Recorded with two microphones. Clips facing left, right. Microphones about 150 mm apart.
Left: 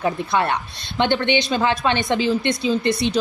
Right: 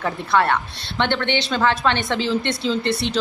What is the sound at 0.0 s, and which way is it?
A woman's voice, 15° left (ahead or behind).